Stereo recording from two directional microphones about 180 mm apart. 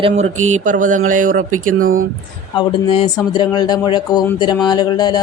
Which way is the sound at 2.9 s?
25° left (ahead or behind).